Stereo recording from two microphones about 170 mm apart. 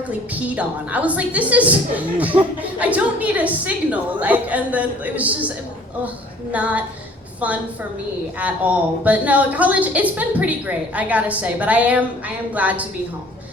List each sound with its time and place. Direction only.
0.1 s a woman's voice: 10° right (ahead or behind)
6.5 s a woman's voice: 10° right (ahead or behind)